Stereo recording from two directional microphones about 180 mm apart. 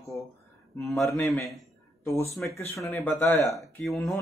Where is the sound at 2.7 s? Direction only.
10° left (ahead or behind).